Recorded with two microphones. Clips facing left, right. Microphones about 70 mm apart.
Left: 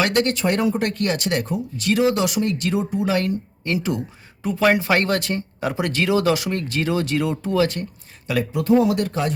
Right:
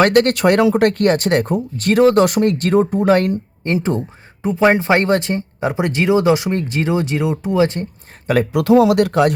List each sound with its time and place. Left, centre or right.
0.0 s speech: right
8.5 s speech: right